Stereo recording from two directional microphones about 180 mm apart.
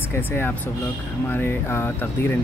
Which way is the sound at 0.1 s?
10° left (ahead or behind).